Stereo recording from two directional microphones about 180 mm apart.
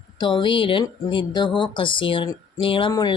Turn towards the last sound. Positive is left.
turn(degrees=25)  # may be behind; listen again after turning